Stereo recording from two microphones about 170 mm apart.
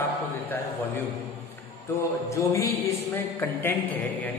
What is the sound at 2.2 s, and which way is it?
A man's voice, 20° left (ahead or behind).